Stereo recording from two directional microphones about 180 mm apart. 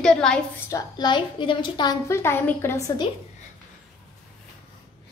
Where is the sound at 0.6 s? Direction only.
20° left (ahead or behind).